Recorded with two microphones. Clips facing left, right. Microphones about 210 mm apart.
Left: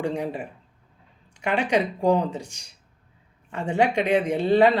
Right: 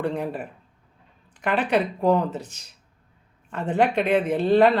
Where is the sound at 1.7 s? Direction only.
15° left (ahead or behind).